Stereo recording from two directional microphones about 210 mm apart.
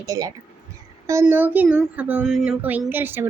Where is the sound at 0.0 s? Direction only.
15° right (ahead or behind).